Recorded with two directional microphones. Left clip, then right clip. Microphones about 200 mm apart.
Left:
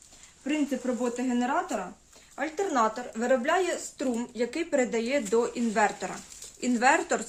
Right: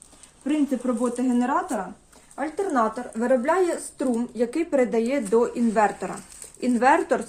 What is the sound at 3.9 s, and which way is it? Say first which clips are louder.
Speech: right 5 dB; 45° right (ahead or behind).